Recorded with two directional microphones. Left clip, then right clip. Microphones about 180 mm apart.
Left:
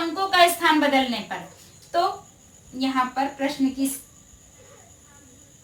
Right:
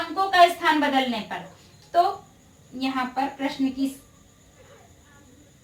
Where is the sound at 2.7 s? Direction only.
25° left (ahead or behind).